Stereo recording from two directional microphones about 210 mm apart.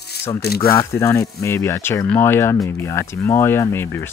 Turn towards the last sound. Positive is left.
turn(degrees=10)  # may be behind; listen again after turning